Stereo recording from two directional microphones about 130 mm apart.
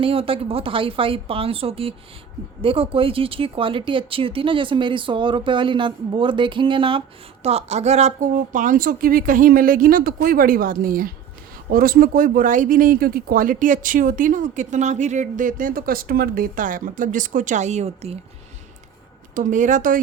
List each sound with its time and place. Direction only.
0.0 s a woman's voice: 45° right (ahead or behind)
7.4 s speech: 55° right (ahead or behind)
19.3 s speech: 85° right